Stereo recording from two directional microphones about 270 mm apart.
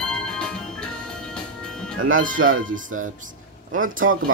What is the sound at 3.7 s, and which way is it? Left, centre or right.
Music, right.